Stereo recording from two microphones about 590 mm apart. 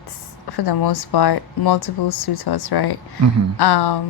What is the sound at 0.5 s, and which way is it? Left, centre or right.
Speech, left.